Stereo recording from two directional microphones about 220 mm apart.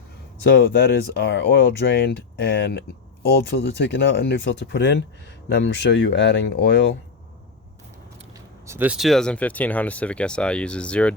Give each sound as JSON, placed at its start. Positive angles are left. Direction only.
{"t": 0.5, "sound": "speech", "side_deg": 55}
{"t": 8.6, "sound": "speech", "side_deg": -10}